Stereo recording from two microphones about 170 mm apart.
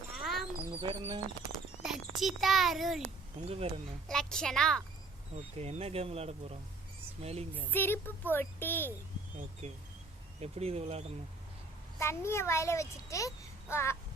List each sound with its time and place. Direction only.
0.1 s a sound: centre (ahead or behind)
0.8 s speech: 30° right (ahead or behind)
1.8 s a child's voice: centre (ahead or behind)
3.4 s speech: 35° right (ahead or behind)
4.1 s a child's voice: 5° left (ahead or behind)
5.5 s speech: 40° right (ahead or behind)
7.7 s a child's voice: 10° left (ahead or behind)
10.4 s speech: 35° right (ahead or behind)
11.9 s a child's voice: 15° left (ahead or behind)